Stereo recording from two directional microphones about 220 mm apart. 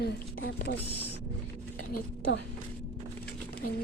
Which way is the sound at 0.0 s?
45° left (ahead or behind).